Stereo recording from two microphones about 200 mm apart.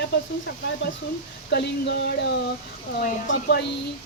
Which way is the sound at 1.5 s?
55° left (ahead or behind).